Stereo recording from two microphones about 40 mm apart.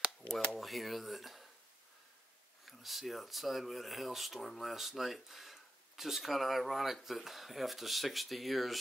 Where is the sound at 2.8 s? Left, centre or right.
Centre.